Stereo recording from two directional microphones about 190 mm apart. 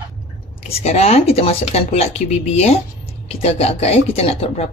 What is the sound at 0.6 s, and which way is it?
Speech, 35° left (ahead or behind).